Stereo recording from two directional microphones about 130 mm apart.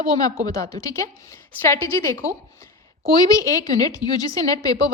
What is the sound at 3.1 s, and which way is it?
A woman's voice, 25° left (ahead or behind).